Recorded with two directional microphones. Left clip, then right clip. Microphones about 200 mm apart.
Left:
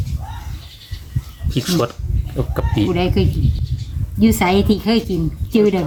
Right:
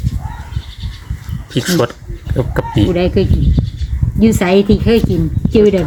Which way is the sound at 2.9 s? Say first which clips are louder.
Right 5 dB; 25° left (ahead or behind).